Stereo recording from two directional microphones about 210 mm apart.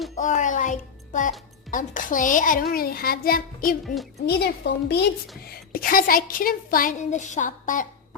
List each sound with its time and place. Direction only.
0.2 s a child's voice: 35° left (ahead or behind)